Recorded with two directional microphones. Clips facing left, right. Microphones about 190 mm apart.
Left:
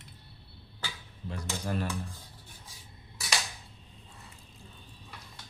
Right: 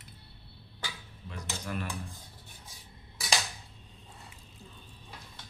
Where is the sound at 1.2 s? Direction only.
35° left (ahead or behind).